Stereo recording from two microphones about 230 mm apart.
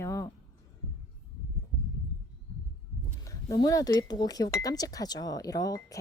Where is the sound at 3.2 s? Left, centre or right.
Centre.